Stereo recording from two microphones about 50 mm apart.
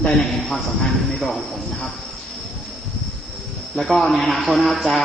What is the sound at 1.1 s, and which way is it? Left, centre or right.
Speech, centre.